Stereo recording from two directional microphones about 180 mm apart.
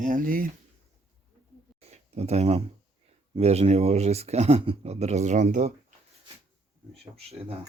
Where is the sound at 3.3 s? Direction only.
35° right (ahead or behind).